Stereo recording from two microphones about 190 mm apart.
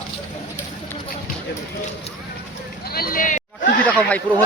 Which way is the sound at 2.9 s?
50° left (ahead or behind).